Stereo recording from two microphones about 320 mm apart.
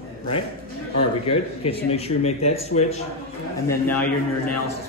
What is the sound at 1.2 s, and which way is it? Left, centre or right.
Speech, centre.